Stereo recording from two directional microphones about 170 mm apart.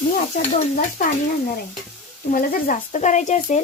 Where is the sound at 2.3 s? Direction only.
55° left (ahead or behind).